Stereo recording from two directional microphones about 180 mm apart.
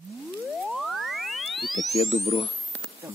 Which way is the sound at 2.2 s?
35° left (ahead or behind).